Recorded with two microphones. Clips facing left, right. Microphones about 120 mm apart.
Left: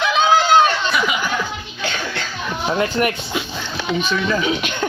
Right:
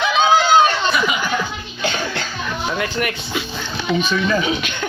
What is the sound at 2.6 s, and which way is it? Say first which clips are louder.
Speech: left 5 dB; 35° left (ahead or behind).